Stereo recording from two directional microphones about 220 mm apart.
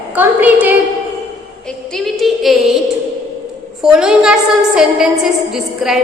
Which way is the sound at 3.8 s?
5° right (ahead or behind).